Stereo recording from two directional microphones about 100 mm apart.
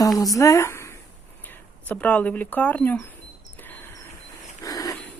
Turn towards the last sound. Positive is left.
turn(degrees=35)  # may be behind; listen again after turning